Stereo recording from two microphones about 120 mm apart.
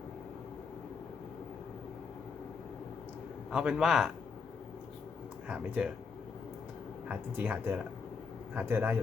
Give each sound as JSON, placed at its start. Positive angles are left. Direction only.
{"t": 3.5, "sound": "a man's voice", "side_deg": -5}
{"t": 5.5, "sound": "speech", "side_deg": -10}
{"t": 7.1, "sound": "speech", "side_deg": -15}